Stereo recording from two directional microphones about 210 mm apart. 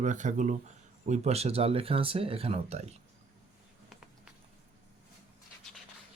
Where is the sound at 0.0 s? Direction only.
35° right (ahead or behind).